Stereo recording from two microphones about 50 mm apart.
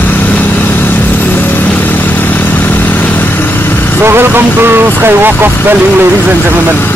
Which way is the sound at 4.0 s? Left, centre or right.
Right.